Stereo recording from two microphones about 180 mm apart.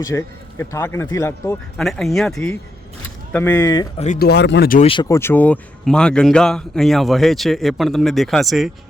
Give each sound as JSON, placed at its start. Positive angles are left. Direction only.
{"t": 0.0, "sound": "speech", "side_deg": 15}
{"t": 1.8, "sound": "speech", "side_deg": 0}
{"t": 3.9, "sound": "speech", "side_deg": 40}
{"t": 4.2, "sound": "speech", "side_deg": 65}
{"t": 4.9, "sound": "speech", "side_deg": 20}